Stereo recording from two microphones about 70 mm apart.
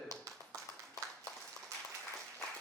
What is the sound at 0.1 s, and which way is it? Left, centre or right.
Clapping, right.